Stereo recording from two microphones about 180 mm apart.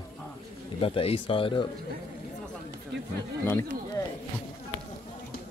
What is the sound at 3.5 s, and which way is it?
Speech, 15° left (ahead or behind).